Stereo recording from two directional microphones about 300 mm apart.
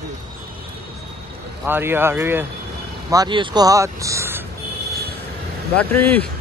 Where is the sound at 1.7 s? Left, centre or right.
Centre.